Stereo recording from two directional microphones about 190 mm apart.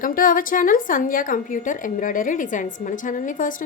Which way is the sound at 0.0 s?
45° left (ahead or behind).